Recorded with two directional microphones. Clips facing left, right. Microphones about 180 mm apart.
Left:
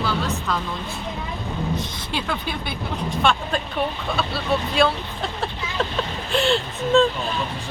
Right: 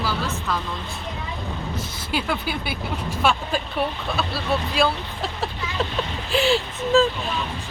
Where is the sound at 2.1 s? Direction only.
5° right (ahead or behind).